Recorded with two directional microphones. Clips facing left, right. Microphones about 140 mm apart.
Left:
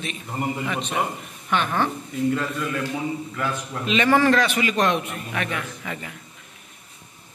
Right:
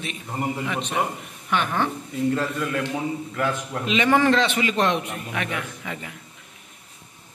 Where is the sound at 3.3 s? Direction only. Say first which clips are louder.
Right 2 dB; 55° right (ahead or behind).